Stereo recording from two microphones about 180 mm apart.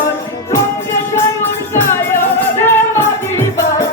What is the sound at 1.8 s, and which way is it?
Music, 15° left (ahead or behind).